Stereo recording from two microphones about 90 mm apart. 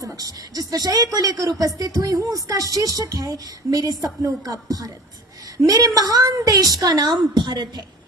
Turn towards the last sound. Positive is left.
turn(degrees=-55)  # may be behind; listen again after turning